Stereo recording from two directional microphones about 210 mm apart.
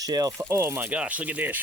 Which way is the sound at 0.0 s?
20° right (ahead or behind).